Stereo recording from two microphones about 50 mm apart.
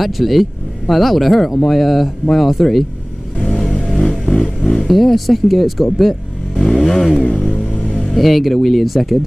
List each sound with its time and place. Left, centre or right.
0.0 s speech: centre
4.6 s vehicle: centre
4.8 s speech: centre
5.9 s vehicle: centre
7.5 s vehicle: left
8.1 s speech: centre